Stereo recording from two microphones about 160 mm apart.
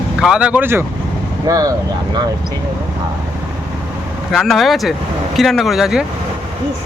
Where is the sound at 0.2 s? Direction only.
5° right (ahead or behind); by 1.7 s 25° right (ahead or behind).